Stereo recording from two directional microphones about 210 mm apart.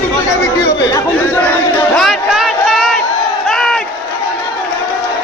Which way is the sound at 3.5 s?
Centre (ahead or behind).